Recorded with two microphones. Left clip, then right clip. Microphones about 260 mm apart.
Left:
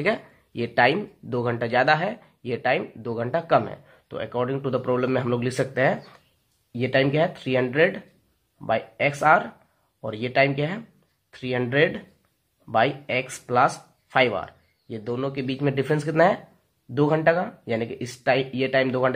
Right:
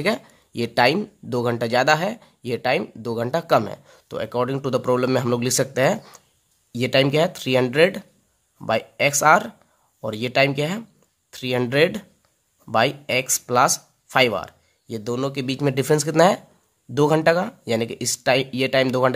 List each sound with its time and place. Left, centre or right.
0.0 s speech: right